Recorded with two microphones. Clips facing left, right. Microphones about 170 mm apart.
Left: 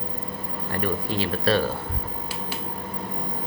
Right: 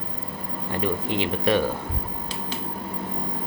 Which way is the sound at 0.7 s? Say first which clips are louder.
Right 1 dB; 20° right (ahead or behind).